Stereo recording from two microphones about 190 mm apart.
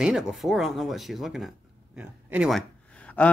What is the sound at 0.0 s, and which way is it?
Speech, centre (ahead or behind).